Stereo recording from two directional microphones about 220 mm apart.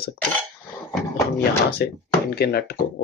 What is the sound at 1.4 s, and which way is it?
Speech, 45° left (ahead or behind).